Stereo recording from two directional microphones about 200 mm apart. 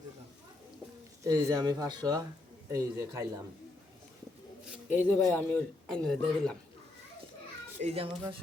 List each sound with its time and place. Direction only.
1.2 s speech: 15° right (ahead or behind)
4.9 s speech: 10° left (ahead or behind)
7.8 s speech: 30° right (ahead or behind)